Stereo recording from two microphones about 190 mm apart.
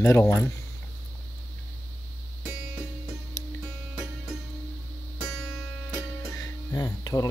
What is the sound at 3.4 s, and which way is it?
Music, 15° left (ahead or behind).